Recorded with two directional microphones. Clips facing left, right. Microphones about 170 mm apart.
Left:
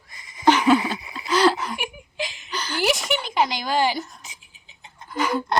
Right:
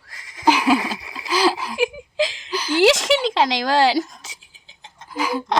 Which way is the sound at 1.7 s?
90° right.